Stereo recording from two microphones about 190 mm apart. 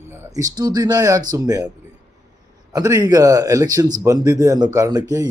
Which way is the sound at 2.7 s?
20° right (ahead or behind).